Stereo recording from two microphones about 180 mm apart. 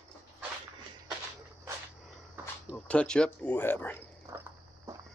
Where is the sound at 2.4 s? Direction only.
10° right (ahead or behind).